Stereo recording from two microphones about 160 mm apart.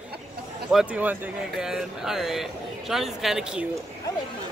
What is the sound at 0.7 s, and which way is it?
Speech, 5° right (ahead or behind).